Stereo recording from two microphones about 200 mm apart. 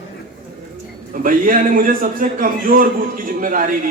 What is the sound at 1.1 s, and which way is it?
A man's voice, 45° right (ahead or behind).